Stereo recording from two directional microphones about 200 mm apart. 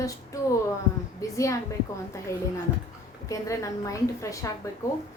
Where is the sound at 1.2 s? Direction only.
15° left (ahead or behind).